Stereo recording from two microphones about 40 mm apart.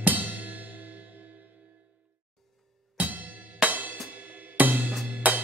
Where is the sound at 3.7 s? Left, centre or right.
Right.